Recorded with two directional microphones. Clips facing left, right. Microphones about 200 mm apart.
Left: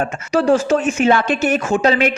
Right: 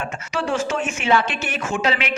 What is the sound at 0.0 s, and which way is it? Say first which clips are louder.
A woman's voice: left 9 dB; 40° left (ahead or behind).